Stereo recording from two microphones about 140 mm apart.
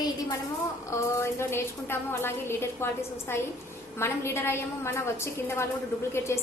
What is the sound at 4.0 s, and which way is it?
A woman's voice, 20° left (ahead or behind).